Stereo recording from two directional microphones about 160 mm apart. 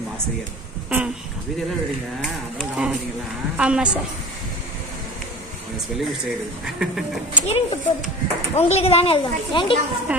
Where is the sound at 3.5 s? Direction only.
5° right (ahead or behind).